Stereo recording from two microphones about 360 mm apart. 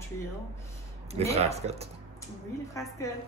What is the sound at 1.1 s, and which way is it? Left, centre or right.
Speech, centre.